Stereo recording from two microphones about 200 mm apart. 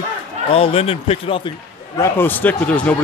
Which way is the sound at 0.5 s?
30° left (ahead or behind).